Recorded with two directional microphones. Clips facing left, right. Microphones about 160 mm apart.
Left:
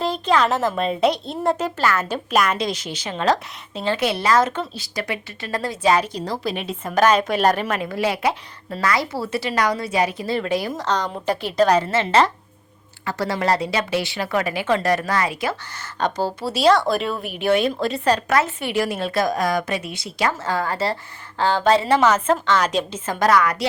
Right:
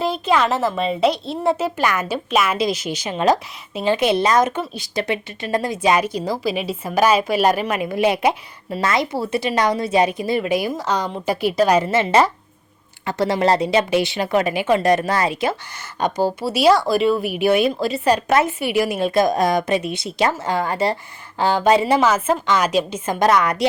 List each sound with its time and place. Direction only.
0.0 s a woman's voice: 10° right (ahead or behind); by 15.5 s 25° right (ahead or behind)
16.0 s a woman's voice: 10° right (ahead or behind)